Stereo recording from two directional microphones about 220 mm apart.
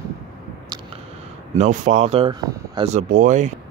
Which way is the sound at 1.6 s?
35° right (ahead or behind).